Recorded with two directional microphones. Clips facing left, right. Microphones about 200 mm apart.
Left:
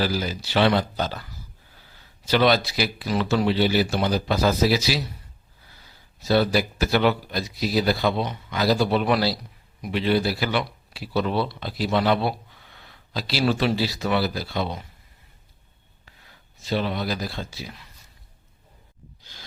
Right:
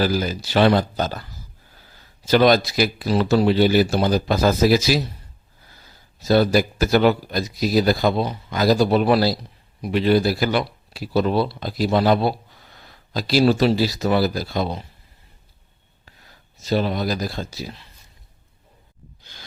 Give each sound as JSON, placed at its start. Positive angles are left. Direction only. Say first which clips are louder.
{"t": 0.0, "sound": "speech", "louder": "right 4 dB", "side_deg": -45}
{"t": 2.2, "sound": "speech", "louder": "right 4 dB", "side_deg": -45}
{"t": 6.2, "sound": "speech", "louder": "right 4 dB", "side_deg": -45}
{"t": 16.6, "sound": "speech", "louder": "right 4 dB", "side_deg": -40}
{"t": 19.2, "sound": "a sound", "louder": "right 2 dB", "side_deg": -60}